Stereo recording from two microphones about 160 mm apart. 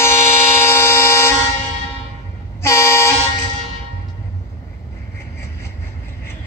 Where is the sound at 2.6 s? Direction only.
15° left (ahead or behind).